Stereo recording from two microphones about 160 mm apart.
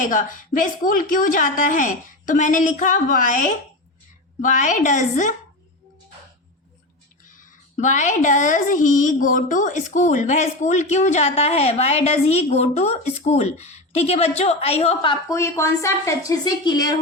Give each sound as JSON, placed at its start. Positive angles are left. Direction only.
{"t": 0.0, "sound": "a woman's voice", "side_deg": 55}
{"t": 7.3, "sound": "speech", "side_deg": 50}
{"t": 15.4, "sound": "a woman's voice", "side_deg": 20}